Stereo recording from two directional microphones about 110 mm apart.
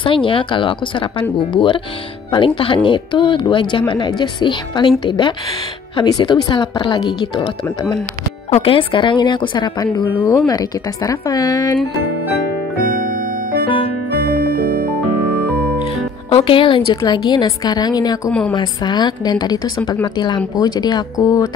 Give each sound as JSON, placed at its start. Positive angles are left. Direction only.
{"t": 0.0, "sound": "speech", "side_deg": 50}
{"t": 8.5, "sound": "speech", "side_deg": 75}
{"t": 8.7, "sound": "a woman's voice", "side_deg": 45}
{"t": 13.7, "sound": "music", "side_deg": 55}
{"t": 15.8, "sound": "a woman's voice", "side_deg": 55}